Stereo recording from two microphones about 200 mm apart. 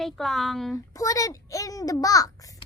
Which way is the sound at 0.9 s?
15° left (ahead or behind).